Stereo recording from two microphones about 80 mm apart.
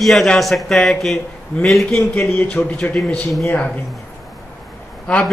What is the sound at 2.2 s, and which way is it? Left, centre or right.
Speech, centre.